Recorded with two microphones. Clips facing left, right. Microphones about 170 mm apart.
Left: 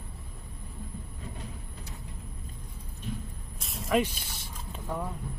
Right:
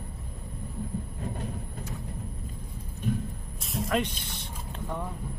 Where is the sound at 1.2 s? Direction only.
55° right (ahead or behind).